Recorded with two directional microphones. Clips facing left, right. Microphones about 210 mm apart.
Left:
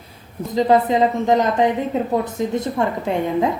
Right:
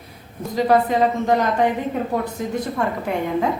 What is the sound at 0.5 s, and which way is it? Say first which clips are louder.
A woman's voice: left 2 dB; 20° left (ahead or behind).